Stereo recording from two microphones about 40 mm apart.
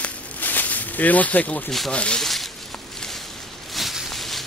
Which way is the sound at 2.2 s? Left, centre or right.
Centre.